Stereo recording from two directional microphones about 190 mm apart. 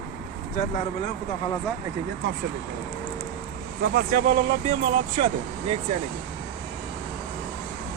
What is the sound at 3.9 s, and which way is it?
Speech, 45° right (ahead or behind).